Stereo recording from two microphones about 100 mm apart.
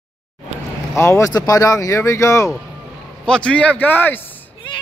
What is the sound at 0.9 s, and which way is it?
Speech, 30° left (ahead or behind).